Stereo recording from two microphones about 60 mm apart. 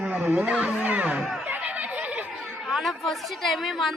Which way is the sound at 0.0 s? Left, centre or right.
Right.